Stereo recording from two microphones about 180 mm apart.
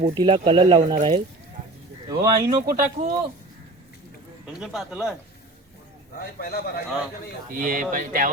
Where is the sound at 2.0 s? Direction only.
20° right (ahead or behind).